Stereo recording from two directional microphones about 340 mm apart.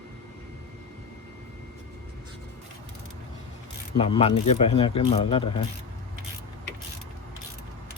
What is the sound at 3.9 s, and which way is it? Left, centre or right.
Speech, centre.